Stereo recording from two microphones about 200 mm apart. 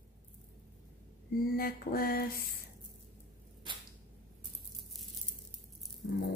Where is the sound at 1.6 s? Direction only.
45° left (ahead or behind).